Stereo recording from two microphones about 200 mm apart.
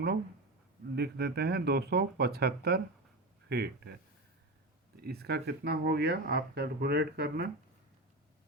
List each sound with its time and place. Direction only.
0.9 s speech: 55° right (ahead or behind)
4.9 s speech: 50° right (ahead or behind)